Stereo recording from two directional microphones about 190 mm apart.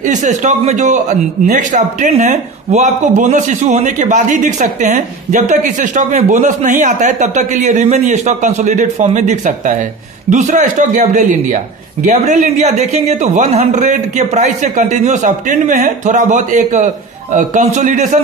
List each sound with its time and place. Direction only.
0.0 s speech: 40° right (ahead or behind)